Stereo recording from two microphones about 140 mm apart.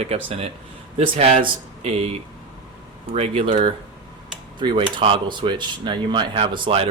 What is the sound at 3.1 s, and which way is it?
Speech, 45° right (ahead or behind).